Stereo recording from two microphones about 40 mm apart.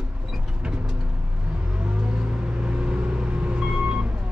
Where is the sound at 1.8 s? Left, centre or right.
Right.